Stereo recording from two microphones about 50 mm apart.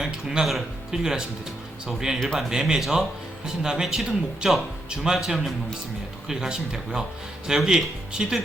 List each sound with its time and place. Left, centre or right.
0.0 s music: centre
0.5 s speech: centre
2.1 s speech: centre
2.5 s speech: centre